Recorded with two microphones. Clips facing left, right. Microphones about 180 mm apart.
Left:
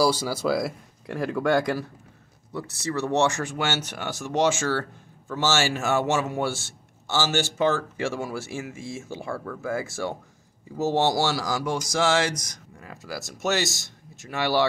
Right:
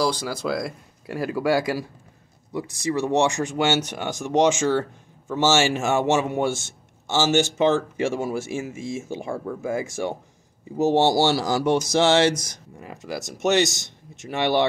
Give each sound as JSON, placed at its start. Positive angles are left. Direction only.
{"t": 0.0, "sound": "a man's voice", "side_deg": 10}